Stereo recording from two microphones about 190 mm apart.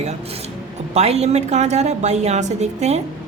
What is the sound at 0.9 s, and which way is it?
A woman's voice, 35° right (ahead or behind).